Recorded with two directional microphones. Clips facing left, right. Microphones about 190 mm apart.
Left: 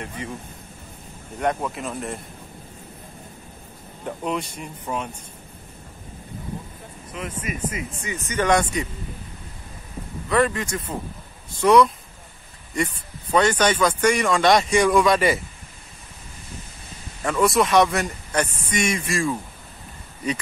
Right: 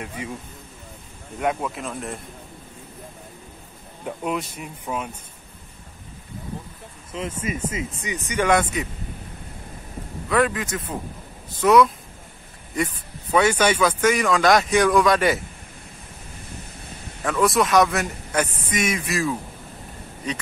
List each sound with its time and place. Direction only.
1.4 s speech: 5° right (ahead or behind)
4.0 s speech: 5° right (ahead or behind)
7.2 s speech: 25° right (ahead or behind); by 8.8 s 5° right (ahead or behind)
10.3 s speech: 5° right (ahead or behind)
17.2 s speech: centre (ahead or behind)